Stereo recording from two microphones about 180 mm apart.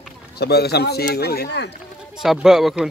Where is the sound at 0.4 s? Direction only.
65° left (ahead or behind).